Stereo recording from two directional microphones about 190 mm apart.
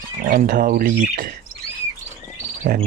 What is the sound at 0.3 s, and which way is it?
Speech, 45° right (ahead or behind).